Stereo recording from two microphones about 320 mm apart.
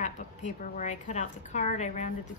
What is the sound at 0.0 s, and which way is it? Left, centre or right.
A woman's voice, left.